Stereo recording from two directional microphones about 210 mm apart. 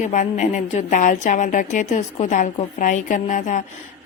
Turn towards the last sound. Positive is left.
turn(degrees=35)  # may be behind; listen again after turning